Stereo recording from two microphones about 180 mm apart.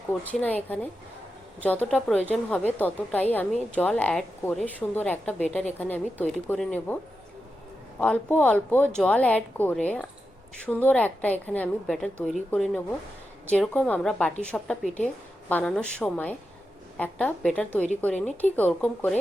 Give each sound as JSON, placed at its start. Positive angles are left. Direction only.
{"t": 0.3, "sound": "a woman's voice", "side_deg": 10}